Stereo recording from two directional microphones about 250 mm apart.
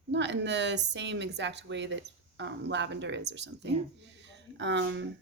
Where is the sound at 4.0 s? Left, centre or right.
Right.